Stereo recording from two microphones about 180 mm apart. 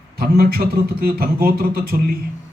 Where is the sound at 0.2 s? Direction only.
55° right (ahead or behind).